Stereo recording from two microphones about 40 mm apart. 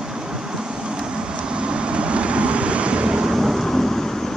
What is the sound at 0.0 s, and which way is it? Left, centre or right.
Vehicle, centre.